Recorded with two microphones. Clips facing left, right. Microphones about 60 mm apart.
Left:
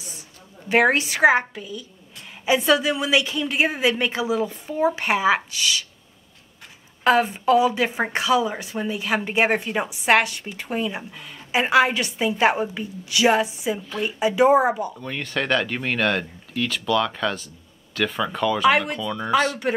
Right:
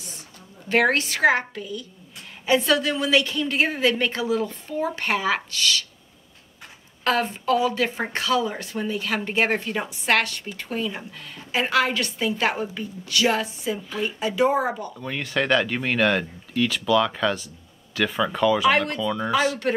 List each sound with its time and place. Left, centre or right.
0.7 s speech: centre
7.1 s speech: centre
15.0 s speech: centre